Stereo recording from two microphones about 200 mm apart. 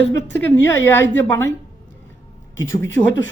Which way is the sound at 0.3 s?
10° left (ahead or behind).